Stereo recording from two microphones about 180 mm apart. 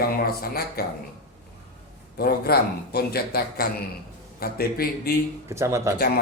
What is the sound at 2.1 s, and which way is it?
Speech, 60° left (ahead or behind).